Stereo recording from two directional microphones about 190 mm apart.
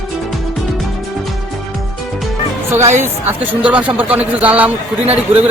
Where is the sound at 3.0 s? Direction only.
10° right (ahead or behind).